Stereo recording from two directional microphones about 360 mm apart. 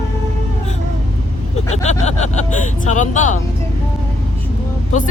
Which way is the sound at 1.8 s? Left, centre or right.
Centre.